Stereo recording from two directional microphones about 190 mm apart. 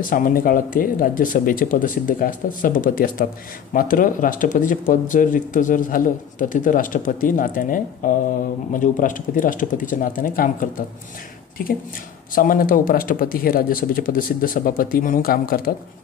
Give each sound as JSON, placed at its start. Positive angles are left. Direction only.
{"t": 0.1, "sound": "speech", "side_deg": 45}
{"t": 12.4, "sound": "speech", "side_deg": 50}